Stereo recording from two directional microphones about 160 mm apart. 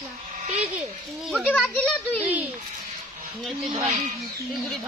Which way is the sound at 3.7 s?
40° right (ahead or behind).